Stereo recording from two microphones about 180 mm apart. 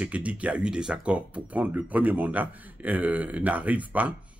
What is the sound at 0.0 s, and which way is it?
Speech, 5° right (ahead or behind).